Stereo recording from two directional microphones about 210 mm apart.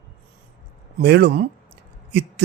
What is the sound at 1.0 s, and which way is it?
Speech, 50° right (ahead or behind).